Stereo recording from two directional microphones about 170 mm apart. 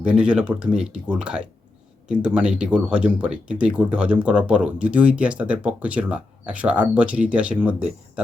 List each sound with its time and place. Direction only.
0.0 s speech: 5° right (ahead or behind)